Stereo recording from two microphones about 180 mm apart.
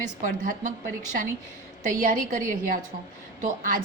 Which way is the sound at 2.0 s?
50° right (ahead or behind).